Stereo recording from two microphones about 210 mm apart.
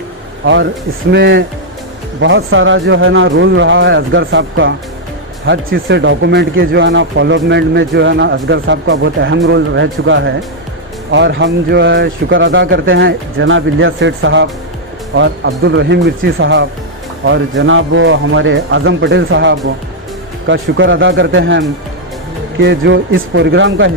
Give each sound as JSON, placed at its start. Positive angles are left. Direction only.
{"t": 0.4, "sound": "speech", "side_deg": -65}
{"t": 2.2, "sound": "speech", "side_deg": -65}
{"t": 22.6, "sound": "speech", "side_deg": -55}